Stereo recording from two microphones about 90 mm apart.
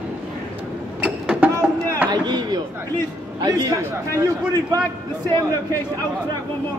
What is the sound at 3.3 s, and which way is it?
Speech, 45° right (ahead or behind).